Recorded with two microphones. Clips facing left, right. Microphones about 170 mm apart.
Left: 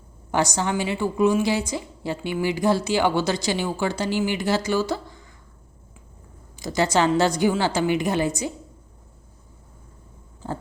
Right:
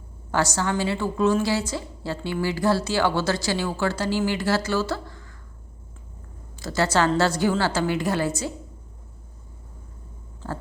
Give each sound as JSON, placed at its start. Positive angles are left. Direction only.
{"t": 0.3, "sound": "a woman's voice", "side_deg": 15}
{"t": 6.6, "sound": "a woman's voice", "side_deg": 15}